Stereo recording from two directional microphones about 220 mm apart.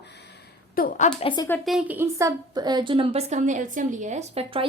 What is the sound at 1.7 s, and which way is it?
A woman's voice, 5° right (ahead or behind).